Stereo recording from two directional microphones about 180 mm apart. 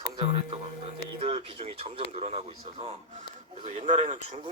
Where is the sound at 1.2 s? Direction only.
35° right (ahead or behind).